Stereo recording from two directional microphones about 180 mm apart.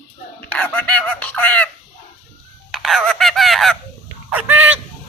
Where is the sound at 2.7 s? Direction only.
Centre (ahead or behind).